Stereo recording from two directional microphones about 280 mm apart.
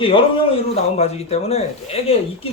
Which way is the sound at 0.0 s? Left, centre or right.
Centre.